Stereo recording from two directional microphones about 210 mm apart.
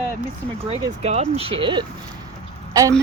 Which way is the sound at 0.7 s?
30° right (ahead or behind).